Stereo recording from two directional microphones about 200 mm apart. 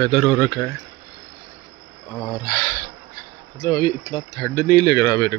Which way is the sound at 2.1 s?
15° left (ahead or behind).